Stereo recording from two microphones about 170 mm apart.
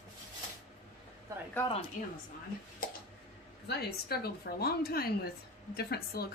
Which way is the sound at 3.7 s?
65° left (ahead or behind).